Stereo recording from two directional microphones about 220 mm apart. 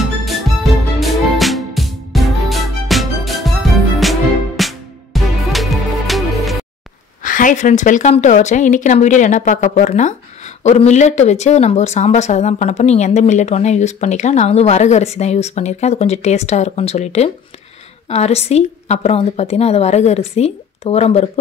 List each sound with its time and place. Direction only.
0.0 s music: centre (ahead or behind)
7.2 s a woman's voice: 35° left (ahead or behind)